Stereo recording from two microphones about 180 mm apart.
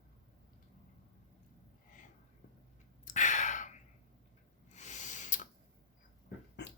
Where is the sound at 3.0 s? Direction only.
40° left (ahead or behind).